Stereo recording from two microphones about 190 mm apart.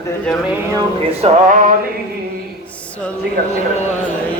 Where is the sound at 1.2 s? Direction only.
40° right (ahead or behind).